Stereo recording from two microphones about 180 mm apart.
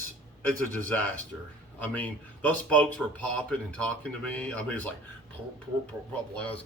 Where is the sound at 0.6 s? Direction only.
10° left (ahead or behind).